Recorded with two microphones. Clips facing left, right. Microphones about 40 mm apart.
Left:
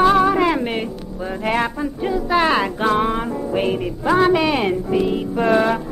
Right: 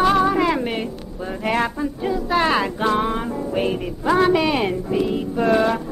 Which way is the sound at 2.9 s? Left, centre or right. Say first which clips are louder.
Left 2 dB; centre.